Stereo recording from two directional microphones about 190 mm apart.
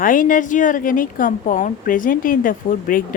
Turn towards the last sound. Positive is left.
turn(degrees=45)  # may be behind; listen again after turning